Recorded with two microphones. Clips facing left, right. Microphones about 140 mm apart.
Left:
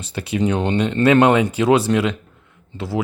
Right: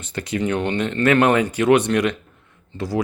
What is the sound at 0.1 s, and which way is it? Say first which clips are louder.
Speech: left 2 dB; 15° left (ahead or behind).